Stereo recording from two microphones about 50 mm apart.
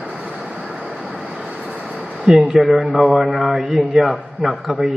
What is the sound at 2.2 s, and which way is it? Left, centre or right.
A man's voice, centre.